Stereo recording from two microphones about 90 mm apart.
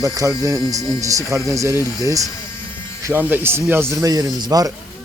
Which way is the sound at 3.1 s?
20° right (ahead or behind).